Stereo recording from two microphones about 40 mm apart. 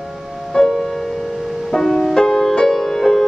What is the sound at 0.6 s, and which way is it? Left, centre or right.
Music, centre.